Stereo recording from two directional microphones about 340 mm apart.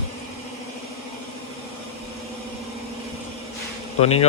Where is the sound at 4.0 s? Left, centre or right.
Centre.